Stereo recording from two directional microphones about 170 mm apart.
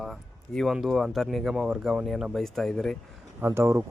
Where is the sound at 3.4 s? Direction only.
15° right (ahead or behind).